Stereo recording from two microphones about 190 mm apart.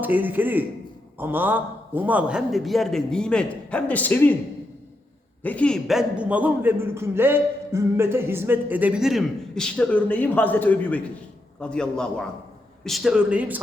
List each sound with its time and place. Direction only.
0.0 s a man's voice: 10° right (ahead or behind); by 4.4 s 10° left (ahead or behind)
5.4 s a man's voice: 10° left (ahead or behind)